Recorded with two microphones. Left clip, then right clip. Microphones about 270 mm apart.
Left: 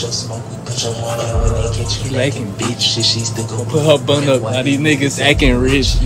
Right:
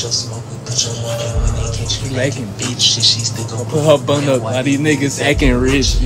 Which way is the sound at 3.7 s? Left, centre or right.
Centre.